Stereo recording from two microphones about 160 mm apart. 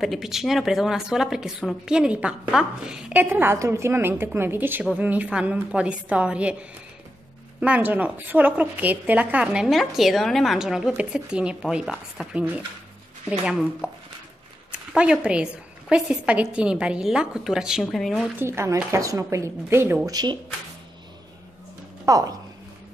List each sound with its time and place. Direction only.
0.0 s speech: centre (ahead or behind)
7.6 s a woman's voice: 10° right (ahead or behind)
18.4 s speech: 15° right (ahead or behind)
22.1 s speech: 20° right (ahead or behind)